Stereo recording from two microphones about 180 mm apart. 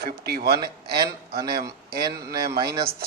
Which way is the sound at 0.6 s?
25° right (ahead or behind).